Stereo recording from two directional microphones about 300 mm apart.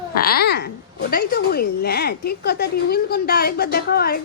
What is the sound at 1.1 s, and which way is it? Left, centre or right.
A woman's voice, left.